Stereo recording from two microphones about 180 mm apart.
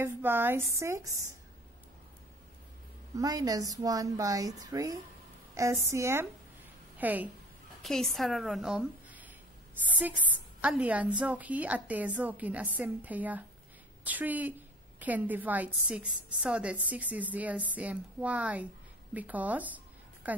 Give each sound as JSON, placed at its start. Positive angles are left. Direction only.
{"t": 0.0, "sound": "a woman's voice", "side_deg": -10}
{"t": 3.2, "sound": "a woman's voice", "side_deg": -20}
{"t": 7.8, "sound": "a woman's voice", "side_deg": 0}